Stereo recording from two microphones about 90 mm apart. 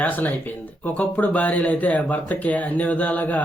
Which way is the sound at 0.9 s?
15° left (ahead or behind).